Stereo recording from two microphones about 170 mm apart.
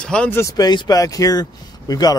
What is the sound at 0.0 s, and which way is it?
Speech, 5° left (ahead or behind).